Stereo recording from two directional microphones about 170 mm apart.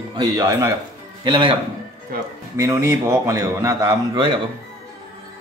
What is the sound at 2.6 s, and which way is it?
A man's voice, 15° right (ahead or behind).